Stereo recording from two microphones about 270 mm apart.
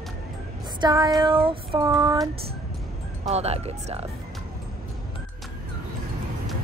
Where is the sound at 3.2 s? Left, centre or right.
Right.